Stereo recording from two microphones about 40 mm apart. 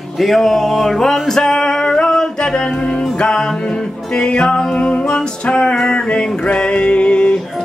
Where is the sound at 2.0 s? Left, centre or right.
Centre.